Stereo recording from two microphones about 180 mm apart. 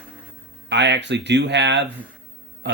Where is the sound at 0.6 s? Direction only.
75° right (ahead or behind).